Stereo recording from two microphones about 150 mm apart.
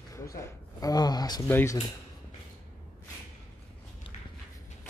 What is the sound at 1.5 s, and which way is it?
Speech, 15° left (ahead or behind).